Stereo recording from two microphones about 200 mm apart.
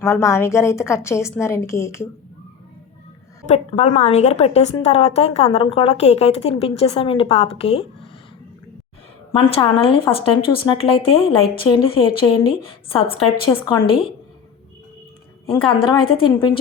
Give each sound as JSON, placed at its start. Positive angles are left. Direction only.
{"t": 0.0, "sound": "a woman's voice", "side_deg": 15}
{"t": 3.4, "sound": "a woman's voice", "side_deg": 35}
{"t": 9.3, "sound": "a woman's voice", "side_deg": 25}
{"t": 15.6, "sound": "a woman's voice", "side_deg": 25}